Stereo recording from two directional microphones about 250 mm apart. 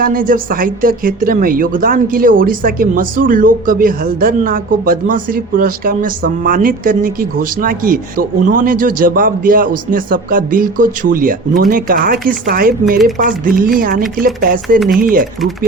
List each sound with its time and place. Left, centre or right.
0.0 s speech: right